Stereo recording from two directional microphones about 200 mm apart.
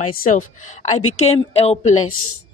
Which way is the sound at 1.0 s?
90° left.